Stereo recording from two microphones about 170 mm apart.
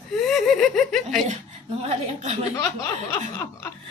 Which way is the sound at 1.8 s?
40° right (ahead or behind).